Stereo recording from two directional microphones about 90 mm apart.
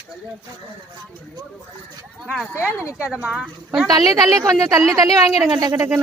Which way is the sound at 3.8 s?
45° right (ahead or behind).